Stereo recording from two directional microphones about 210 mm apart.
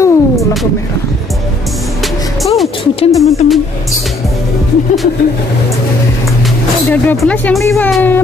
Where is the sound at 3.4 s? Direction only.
35° left (ahead or behind).